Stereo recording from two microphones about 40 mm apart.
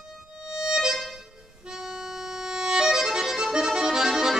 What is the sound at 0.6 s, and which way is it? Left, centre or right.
Music, centre.